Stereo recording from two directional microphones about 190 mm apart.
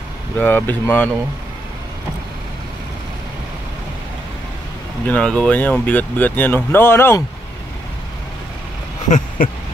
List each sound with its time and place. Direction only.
0.4 s speech: 10° left (ahead or behind)
5.0 s speech: 5° left (ahead or behind)
9.4 s a sound: 50° left (ahead or behind)